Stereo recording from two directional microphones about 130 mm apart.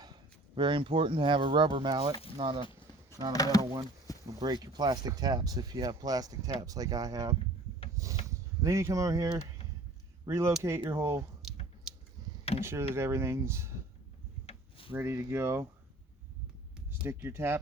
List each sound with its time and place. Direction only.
0.0 s speech: 35° right (ahead or behind)
3.3 s speech: 30° left (ahead or behind)
4.3 s speech: 30° right (ahead or behind)
12.5 s speech: 20° right (ahead or behind)
14.4 s a sound: 45° left (ahead or behind)
14.9 s speech: 20° right (ahead or behind)
16.9 s speech: 15° right (ahead or behind)